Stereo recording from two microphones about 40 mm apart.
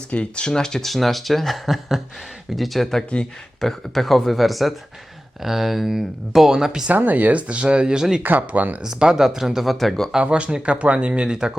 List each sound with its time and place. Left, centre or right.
0.1 s speech: left
0.4 s speech: centre
0.9 s speech: centre
6.9 s speech: right
8.2 s speech: right
8.8 s speech: centre
9.7 s speech: centre
10.2 s speech: right